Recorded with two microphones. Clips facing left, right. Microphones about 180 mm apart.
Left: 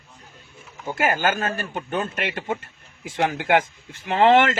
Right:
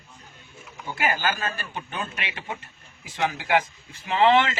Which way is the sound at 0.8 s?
50° left (ahead or behind).